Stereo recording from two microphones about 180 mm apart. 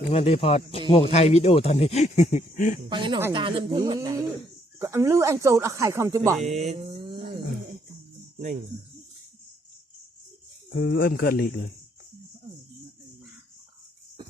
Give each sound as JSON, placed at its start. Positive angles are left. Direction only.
{"t": 0.1, "sound": "speech", "side_deg": 35}
{"t": 2.9, "sound": "speech", "side_deg": -25}
{"t": 6.4, "sound": "a sound", "side_deg": -40}
{"t": 10.8, "sound": "speech", "side_deg": 60}